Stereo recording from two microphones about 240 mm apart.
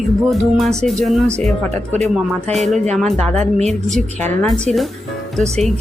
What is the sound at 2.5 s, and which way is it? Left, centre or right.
Music, centre.